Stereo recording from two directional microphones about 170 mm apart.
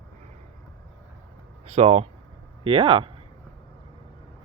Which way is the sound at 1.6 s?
40° right (ahead or behind).